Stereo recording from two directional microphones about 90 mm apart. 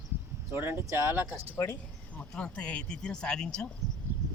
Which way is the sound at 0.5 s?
25° right (ahead or behind).